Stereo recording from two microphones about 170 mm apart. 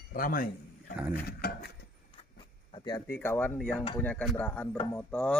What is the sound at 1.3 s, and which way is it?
Speech, 70° left (ahead or behind).